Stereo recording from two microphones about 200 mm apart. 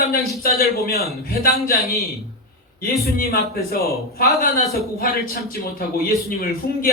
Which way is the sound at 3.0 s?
50° left (ahead or behind).